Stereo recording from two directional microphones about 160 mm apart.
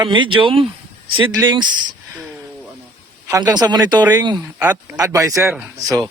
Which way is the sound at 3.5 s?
25° right (ahead or behind).